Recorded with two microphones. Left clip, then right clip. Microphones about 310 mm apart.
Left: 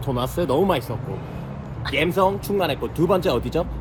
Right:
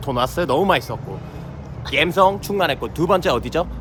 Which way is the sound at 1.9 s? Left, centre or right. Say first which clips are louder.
Right 4 dB; centre.